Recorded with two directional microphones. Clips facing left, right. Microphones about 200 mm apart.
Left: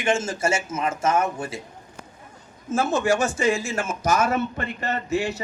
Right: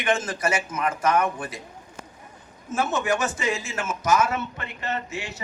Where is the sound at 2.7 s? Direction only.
30° left (ahead or behind).